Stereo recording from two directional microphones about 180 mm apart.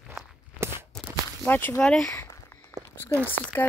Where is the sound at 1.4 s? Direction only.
10° left (ahead or behind).